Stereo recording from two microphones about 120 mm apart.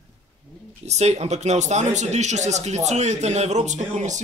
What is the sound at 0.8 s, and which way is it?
Speech, 65° right (ahead or behind).